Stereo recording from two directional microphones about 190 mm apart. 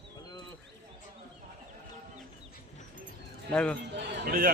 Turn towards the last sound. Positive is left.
turn(degrees=-50)  # may be behind; listen again after turning